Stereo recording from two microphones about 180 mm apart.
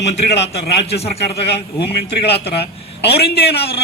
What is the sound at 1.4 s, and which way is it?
A man's voice, 65° left (ahead or behind).